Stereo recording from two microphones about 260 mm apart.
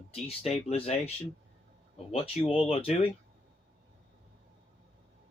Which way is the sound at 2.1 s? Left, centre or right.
Left.